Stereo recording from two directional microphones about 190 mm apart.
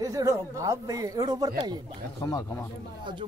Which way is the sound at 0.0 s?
15° right (ahead or behind).